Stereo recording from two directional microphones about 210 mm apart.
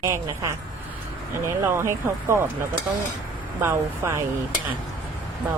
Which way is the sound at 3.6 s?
10° right (ahead or behind).